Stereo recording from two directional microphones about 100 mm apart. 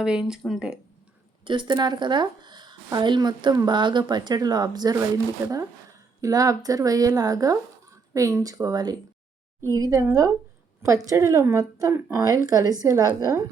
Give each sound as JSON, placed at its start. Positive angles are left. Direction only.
{"t": 0.0, "sound": "speech", "side_deg": -10}
{"t": 1.5, "sound": "speech", "side_deg": -50}
{"t": 6.2, "sound": "speech", "side_deg": -35}
{"t": 11.9, "sound": "speech", "side_deg": -20}
{"t": 12.2, "sound": "speech", "side_deg": -35}